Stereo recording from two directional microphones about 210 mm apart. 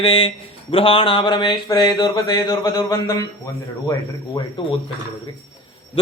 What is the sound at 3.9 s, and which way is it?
Speech, 20° left (ahead or behind).